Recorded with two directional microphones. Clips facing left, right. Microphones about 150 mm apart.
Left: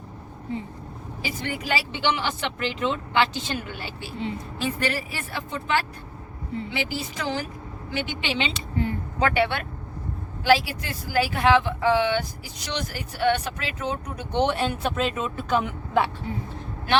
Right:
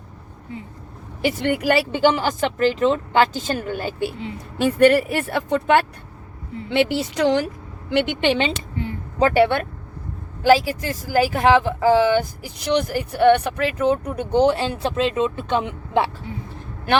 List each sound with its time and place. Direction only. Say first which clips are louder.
1.2 s a woman's voice: right 11 dB; 70° right (ahead or behind)
2.0 s speech: right 8 dB; 45° right (ahead or behind)
4.5 s a woman's voice: right 15 dB; 60° right (ahead or behind); by 7.4 s 75° right (ahead or behind)
7.9 s speech: right 9 dB; 60° right (ahead or behind)
9.1 s speech: right 7 dB; 40° right (ahead or behind)
12.7 s speech: right 11 dB; 55° right (ahead or behind)
14.3 s speech: right 6 dB; 30° right (ahead or behind)